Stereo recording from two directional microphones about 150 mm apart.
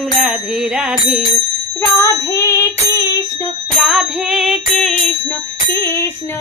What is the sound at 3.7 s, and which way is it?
Music, centre (ahead or behind).